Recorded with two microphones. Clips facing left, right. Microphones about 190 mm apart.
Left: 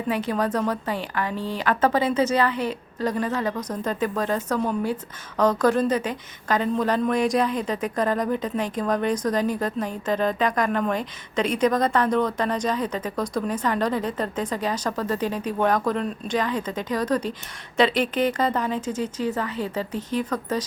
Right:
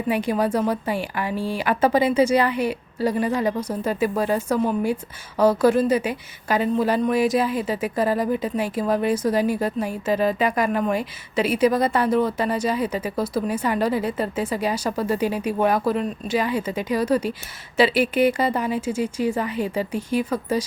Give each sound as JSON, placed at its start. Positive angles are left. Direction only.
{"t": 0.1, "sound": "a woman's voice", "side_deg": -15}